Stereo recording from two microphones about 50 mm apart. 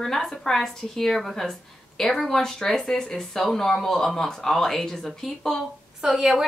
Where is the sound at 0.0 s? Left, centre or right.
Centre.